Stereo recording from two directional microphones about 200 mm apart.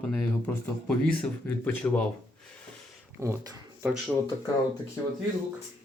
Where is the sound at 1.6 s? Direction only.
5° left (ahead or behind).